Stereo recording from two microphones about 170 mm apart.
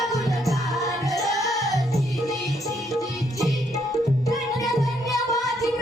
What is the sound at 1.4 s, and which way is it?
Music, 20° left (ahead or behind).